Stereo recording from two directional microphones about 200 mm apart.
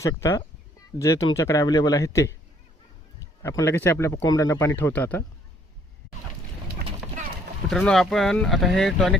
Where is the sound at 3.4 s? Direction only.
15° left (ahead or behind).